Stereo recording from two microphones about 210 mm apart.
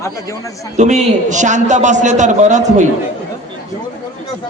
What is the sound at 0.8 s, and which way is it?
A man's voice, 35° right (ahead or behind).